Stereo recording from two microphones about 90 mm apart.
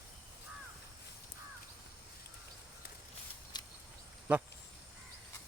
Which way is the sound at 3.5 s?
50° left (ahead or behind).